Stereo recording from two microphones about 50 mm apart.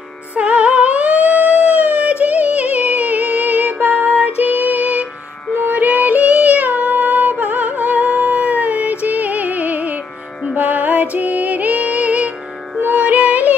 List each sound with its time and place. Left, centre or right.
0.4 s music: right
3.8 s a sound: right
4.4 s music: right